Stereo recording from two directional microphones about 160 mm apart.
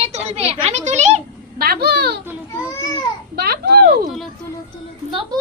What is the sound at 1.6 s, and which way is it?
Speech, 80° right.